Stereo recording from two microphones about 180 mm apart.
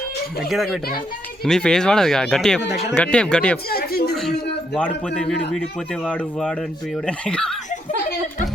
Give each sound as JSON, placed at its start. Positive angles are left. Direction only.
{"t": 0.4, "sound": "speech", "side_deg": 0}
{"t": 3.7, "sound": "speech", "side_deg": 55}
{"t": 4.1, "sound": "a sound", "side_deg": 0}
{"t": 5.0, "sound": "speech", "side_deg": 5}